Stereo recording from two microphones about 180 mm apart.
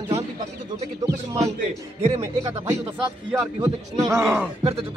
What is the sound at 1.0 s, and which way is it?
Speech, 15° right (ahead or behind).